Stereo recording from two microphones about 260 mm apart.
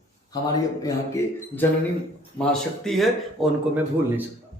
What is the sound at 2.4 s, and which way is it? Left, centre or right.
Speech, centre.